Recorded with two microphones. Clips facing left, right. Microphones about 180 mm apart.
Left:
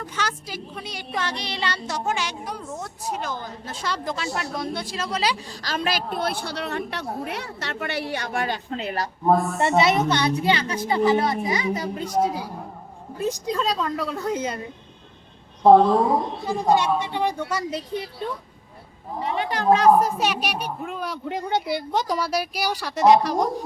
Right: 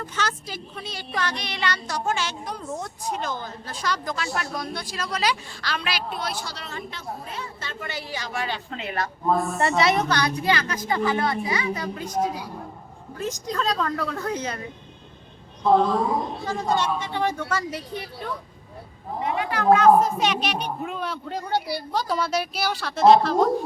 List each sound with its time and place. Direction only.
0.0 s speech: 10° left (ahead or behind); by 2.0 s 30° left (ahead or behind)
2.0 s speech: 15° left (ahead or behind)
3.4 s speech: 25° left (ahead or behind)
9.6 s speech: 20° left (ahead or behind)
13.1 s speech: 10° left (ahead or behind)
16.5 s speech: 15° left (ahead or behind)
19.2 s a woman's voice: 30° left (ahead or behind)
20.0 s speech: 10° left (ahead or behind)